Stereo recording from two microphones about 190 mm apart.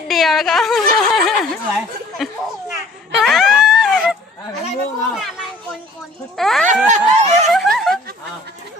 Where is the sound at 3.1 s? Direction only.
Centre (ahead or behind).